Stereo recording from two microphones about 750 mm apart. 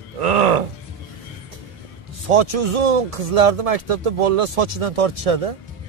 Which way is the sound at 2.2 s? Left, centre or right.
Right.